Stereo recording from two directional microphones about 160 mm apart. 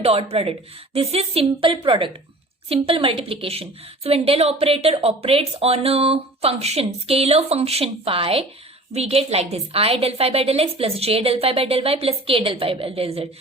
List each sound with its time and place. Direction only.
0.0 s a woman's voice: 40° right (ahead or behind)